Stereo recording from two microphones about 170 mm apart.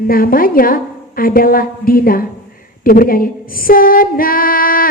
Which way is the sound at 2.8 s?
55° left (ahead or behind).